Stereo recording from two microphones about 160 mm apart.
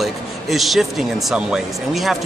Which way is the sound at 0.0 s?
Centre (ahead or behind).